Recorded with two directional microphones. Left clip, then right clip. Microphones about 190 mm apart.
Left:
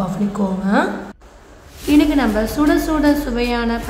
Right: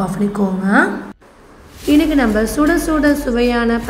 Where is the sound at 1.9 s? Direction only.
15° right (ahead or behind).